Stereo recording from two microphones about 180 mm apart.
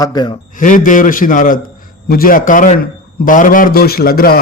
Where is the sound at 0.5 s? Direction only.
45° left (ahead or behind).